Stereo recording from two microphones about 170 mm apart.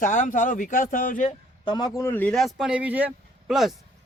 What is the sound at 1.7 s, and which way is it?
Speech, 25° left (ahead or behind).